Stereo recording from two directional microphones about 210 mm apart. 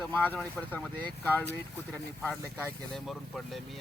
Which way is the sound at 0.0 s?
10° left (ahead or behind).